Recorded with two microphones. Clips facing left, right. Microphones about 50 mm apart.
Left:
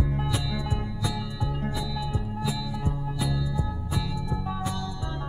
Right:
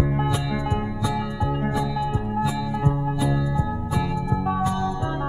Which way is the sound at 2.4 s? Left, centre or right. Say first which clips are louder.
Right 7 dB; right.